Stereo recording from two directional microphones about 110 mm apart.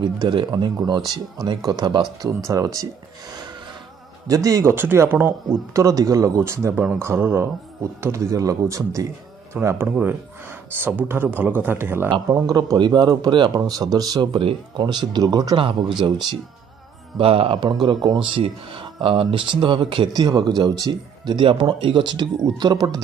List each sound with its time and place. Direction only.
0.0 s speech: 45° right (ahead or behind)
4.3 s speech: 30° right (ahead or behind)
12.3 s speech: 35° right (ahead or behind)
17.2 s speech: 60° right (ahead or behind); by 21.4 s 35° right (ahead or behind)
21.4 s speech: 50° right (ahead or behind)